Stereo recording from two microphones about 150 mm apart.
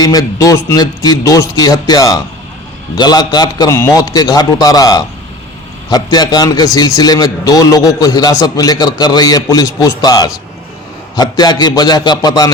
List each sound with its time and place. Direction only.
0.0 s a man's voice: 25° left (ahead or behind)